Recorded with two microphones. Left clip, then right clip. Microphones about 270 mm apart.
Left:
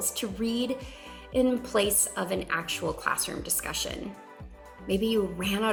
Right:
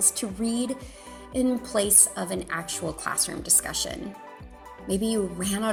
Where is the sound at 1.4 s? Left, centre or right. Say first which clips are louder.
Right 3 dB; right.